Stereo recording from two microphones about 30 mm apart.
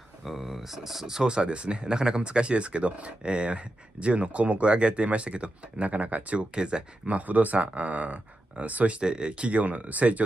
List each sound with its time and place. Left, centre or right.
0.2 s speech: centre
1.2 s speech: right
6.5 s speech: right
7.1 s speech: right
9.0 s speech: right
9.4 s speech: right